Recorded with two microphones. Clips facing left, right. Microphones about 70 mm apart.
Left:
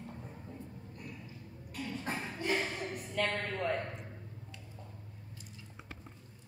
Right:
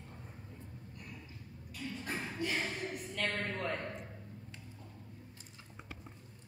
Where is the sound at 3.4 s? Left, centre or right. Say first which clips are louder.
Left 3 dB; centre.